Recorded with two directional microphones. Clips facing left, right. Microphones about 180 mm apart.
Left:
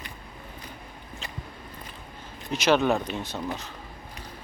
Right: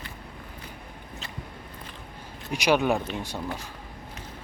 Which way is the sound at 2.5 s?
15° right (ahead or behind).